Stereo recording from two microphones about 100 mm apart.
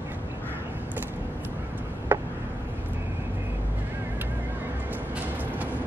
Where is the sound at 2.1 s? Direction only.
20° right (ahead or behind).